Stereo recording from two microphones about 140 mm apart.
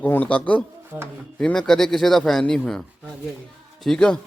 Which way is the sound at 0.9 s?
15° right (ahead or behind).